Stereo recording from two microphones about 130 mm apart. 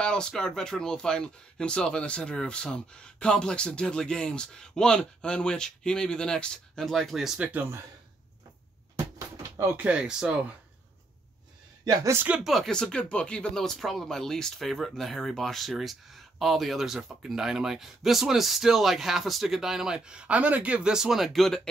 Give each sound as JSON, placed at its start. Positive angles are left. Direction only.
{"t": 0.0, "sound": "speech", "side_deg": 5}
{"t": 9.6, "sound": "speech", "side_deg": -15}
{"t": 11.8, "sound": "speech", "side_deg": -25}
{"t": 12.3, "sound": "speech", "side_deg": 0}